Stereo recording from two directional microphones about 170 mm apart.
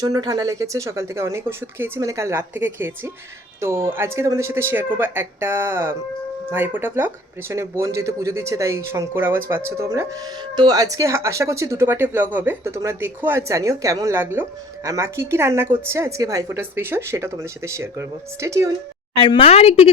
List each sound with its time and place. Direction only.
0.0 s a woman's voice: 20° right (ahead or behind)
19.1 s a woman's voice: 30° left (ahead or behind)